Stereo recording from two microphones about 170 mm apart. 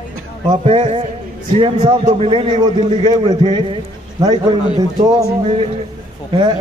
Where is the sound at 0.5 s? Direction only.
30° right (ahead or behind).